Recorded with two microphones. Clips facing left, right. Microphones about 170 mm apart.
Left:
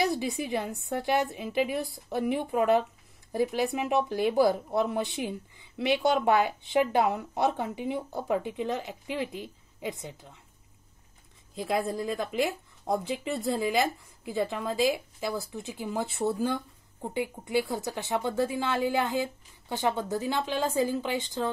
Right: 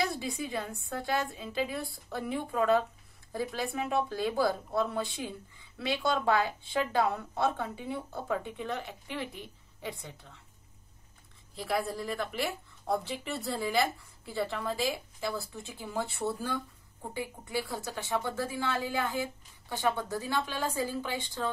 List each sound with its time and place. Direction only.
0.2 s speech: 20° left (ahead or behind)
11.5 s speech: 20° left (ahead or behind)